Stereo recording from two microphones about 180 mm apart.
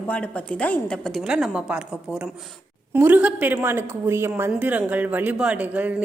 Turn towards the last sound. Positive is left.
turn(degrees=-10)  # may be behind; listen again after turning